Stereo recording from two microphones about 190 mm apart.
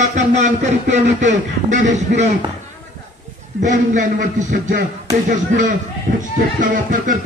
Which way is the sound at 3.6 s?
40° right (ahead or behind).